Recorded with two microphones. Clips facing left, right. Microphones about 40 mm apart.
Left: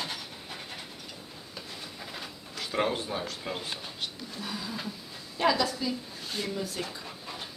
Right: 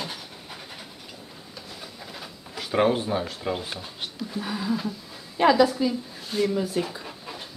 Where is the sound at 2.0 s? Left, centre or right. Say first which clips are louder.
Even; centre.